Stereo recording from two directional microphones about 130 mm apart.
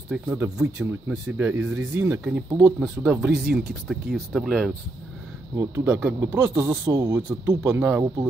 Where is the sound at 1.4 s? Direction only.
15° right (ahead or behind); by 4.7 s centre (ahead or behind).